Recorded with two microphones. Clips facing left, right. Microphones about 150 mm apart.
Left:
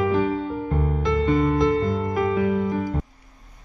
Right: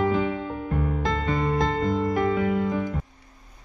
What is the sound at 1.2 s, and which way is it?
Music, centre (ahead or behind).